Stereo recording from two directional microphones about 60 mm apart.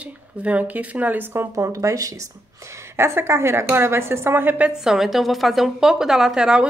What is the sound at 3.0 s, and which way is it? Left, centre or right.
A woman's voice, right.